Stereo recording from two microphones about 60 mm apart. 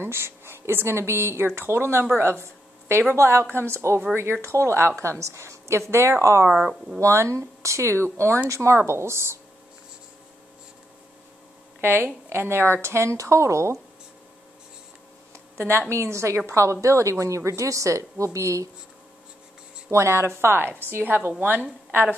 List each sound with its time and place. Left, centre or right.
0.0 s a woman's voice: right
11.8 s a woman's voice: right
12.8 s a woman's voice: right
15.5 s a woman's voice: right
19.9 s a woman's voice: right